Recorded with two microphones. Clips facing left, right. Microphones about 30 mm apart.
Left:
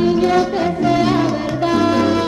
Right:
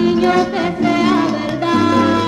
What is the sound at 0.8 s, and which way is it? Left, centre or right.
Music, right.